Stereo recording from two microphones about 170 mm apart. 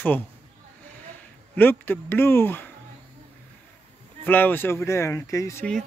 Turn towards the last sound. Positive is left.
turn(degrees=20)  # may be behind; listen again after turning